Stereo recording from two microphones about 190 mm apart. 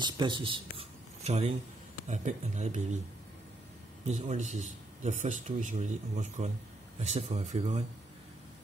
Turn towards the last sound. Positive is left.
turn(degrees=-35)  # may be behind; listen again after turning